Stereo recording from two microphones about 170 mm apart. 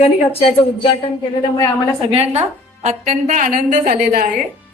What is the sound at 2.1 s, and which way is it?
A woman's voice, 35° right (ahead or behind).